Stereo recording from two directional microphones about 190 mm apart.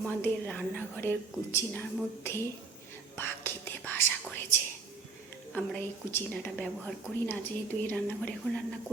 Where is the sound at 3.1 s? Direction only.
10° left (ahead or behind).